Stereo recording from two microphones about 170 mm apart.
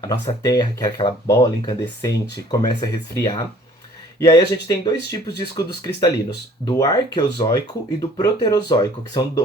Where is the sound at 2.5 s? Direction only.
20° left (ahead or behind).